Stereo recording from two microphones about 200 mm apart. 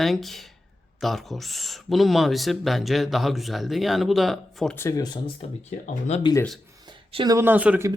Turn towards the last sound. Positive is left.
turn(degrees=-10)  # may be behind; listen again after turning